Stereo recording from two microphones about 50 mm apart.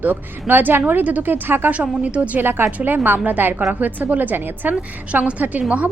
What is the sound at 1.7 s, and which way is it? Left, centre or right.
Speech, right.